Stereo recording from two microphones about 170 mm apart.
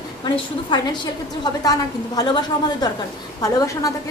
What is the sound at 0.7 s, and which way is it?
A woman's voice, 25° left (ahead or behind).